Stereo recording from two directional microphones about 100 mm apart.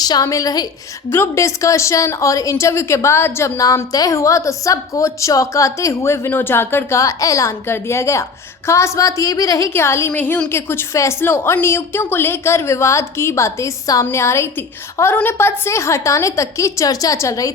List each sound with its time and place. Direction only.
0.0 s a woman's voice: 40° left (ahead or behind)
1.1 s a woman's voice: 30° left (ahead or behind)
10.1 s a woman's voice: 15° left (ahead or behind); by 17.5 s 30° left (ahead or behind)